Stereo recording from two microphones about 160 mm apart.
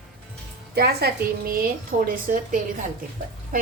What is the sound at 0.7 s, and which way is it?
A woman's voice, 80° right.